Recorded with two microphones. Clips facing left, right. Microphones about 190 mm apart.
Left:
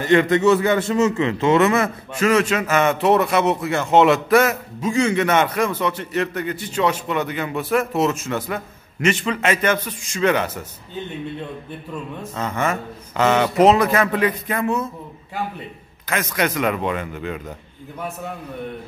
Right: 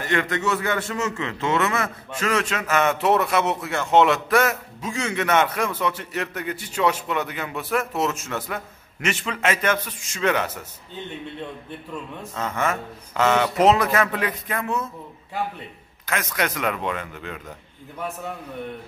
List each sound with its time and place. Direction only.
0.0 s a man's voice: 25° left (ahead or behind)
2.1 s a man's voice: 5° left (ahead or behind)
12.2 s a man's voice: centre (ahead or behind)
16.1 s a man's voice: centre (ahead or behind)